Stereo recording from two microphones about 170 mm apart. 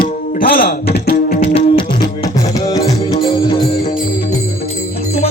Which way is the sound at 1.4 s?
35° left (ahead or behind).